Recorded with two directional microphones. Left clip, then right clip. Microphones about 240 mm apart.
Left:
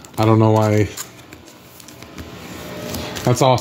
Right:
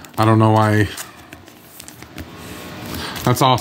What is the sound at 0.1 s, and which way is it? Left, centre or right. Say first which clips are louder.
Speech: even; right.